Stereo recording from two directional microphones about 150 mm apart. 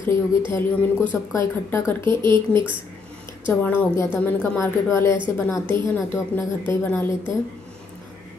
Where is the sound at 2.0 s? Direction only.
30° right (ahead or behind).